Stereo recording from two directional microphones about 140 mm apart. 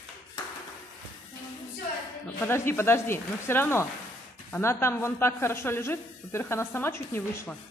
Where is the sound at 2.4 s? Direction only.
15° left (ahead or behind).